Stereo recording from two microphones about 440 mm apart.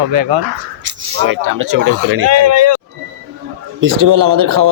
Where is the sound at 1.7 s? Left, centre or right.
Right.